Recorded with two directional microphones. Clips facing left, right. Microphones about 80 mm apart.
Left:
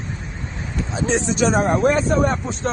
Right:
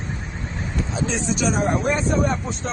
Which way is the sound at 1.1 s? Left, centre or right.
Left.